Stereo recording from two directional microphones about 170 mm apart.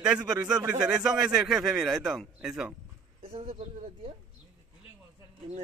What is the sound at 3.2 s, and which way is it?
Speech, 35° right (ahead or behind).